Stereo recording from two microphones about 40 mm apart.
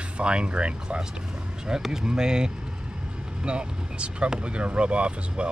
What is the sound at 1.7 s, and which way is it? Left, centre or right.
Speech, centre.